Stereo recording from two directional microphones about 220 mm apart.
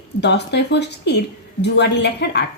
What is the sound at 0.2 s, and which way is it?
A woman's voice, 50° left (ahead or behind).